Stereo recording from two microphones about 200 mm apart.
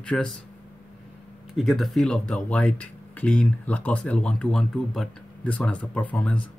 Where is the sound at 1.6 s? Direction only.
Centre (ahead or behind).